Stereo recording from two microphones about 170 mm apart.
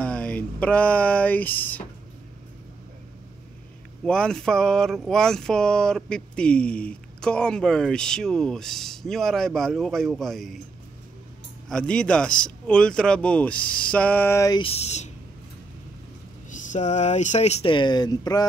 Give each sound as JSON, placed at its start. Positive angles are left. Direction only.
{"t": 0.0, "sound": "a sound", "side_deg": 5}
{"t": 4.0, "sound": "speech", "side_deg": 5}
{"t": 11.7, "sound": "speech", "side_deg": 5}
{"t": 14.6, "sound": "speech", "side_deg": 35}
{"t": 16.4, "sound": "speech", "side_deg": 45}